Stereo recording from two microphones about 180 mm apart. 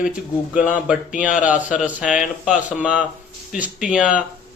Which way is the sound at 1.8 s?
5° right (ahead or behind).